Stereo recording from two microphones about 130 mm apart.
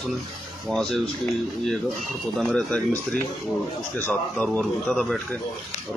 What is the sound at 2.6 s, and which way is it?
Speech, 10° left (ahead or behind).